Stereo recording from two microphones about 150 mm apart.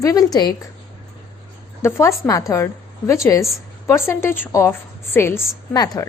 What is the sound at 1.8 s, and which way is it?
A woman's voice, 15° left (ahead or behind).